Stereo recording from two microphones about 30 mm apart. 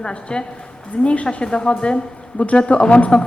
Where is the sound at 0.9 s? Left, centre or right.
Left.